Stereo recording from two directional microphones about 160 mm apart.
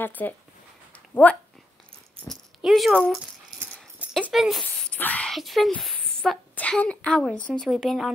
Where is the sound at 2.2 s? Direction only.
Centre (ahead or behind).